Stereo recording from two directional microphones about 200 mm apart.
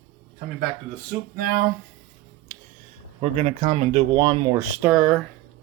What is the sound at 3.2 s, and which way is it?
Speech, 30° right (ahead or behind).